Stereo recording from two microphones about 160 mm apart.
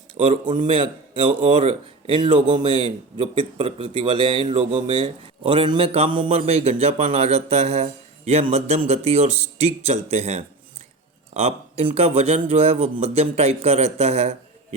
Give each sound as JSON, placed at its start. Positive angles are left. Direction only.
{"t": 0.7, "sound": "speech", "side_deg": -30}